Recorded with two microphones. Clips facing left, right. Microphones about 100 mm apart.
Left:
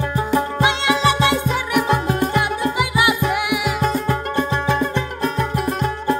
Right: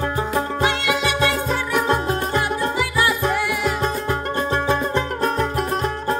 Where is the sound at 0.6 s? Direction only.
25° left (ahead or behind).